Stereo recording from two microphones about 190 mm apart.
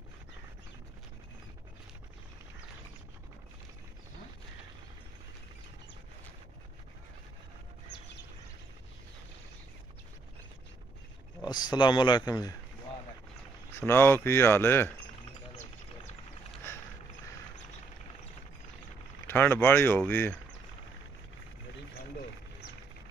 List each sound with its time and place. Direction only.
11.4 s speech: 25° left (ahead or behind)
13.7 s speech: 10° left (ahead or behind)
19.2 s speech: 10° left (ahead or behind)